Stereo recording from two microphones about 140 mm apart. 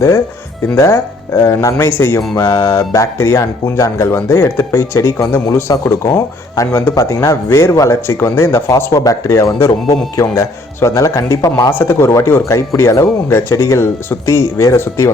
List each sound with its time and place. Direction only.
0.8 s speech: 20° left (ahead or behind)